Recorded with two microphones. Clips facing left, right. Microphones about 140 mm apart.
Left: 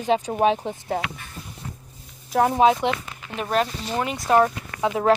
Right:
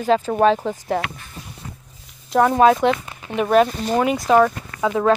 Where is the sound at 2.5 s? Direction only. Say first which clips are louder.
Right 5 dB; 50° right (ahead or behind).